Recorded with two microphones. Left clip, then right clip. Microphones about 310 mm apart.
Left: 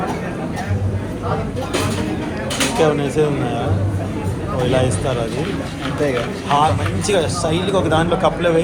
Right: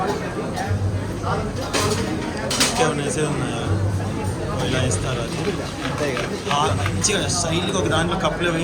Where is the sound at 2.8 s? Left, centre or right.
Centre.